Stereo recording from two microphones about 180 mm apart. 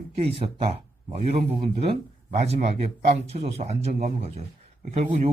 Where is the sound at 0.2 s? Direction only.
30° right (ahead or behind).